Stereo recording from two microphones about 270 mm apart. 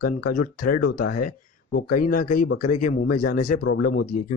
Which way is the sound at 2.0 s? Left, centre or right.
Left.